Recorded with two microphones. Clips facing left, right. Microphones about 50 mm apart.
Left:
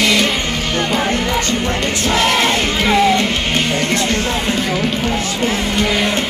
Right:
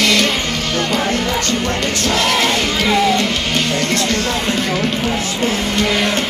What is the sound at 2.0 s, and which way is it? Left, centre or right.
Music, centre.